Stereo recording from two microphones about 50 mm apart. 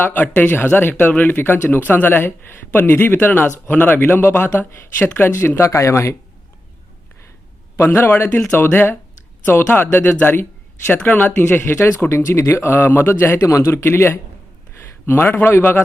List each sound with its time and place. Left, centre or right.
0.0 s speech: left
5.3 s speech: left
5.6 s speech: left
7.8 s speech: left
8.5 s speech: left
12.0 s speech: left
12.7 s speech: left